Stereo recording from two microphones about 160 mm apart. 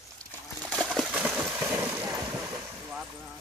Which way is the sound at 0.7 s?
5° right (ahead or behind).